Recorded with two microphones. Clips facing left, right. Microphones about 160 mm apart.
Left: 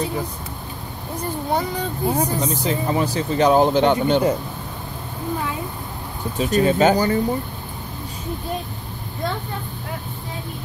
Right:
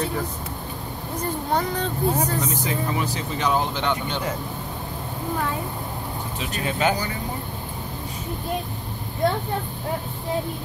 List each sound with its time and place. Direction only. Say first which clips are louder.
1.5 s speech: left 1 dB; 10° left (ahead or behind)
2.4 s speech: left 4 dB; 35° left (ahead or behind)
6.4 s speech: left 8 dB; 40° left (ahead or behind)